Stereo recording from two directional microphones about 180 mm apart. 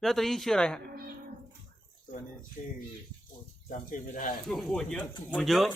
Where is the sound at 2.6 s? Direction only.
40° left (ahead or behind).